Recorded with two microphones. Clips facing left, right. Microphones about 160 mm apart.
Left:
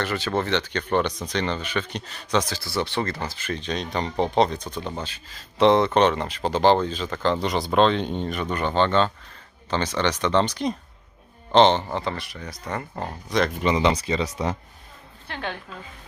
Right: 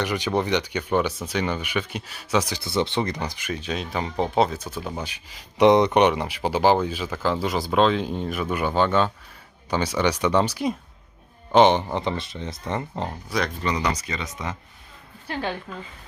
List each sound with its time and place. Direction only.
0.0 s speech: 15° right (ahead or behind)
13.6 s speech: 20° left (ahead or behind)
15.3 s a woman's voice: 5° right (ahead or behind)